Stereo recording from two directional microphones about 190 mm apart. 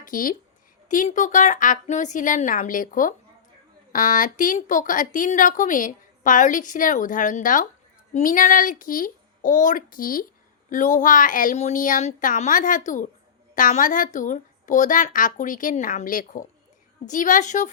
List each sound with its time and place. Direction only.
0.0 s a woman's voice: 45° left (ahead or behind)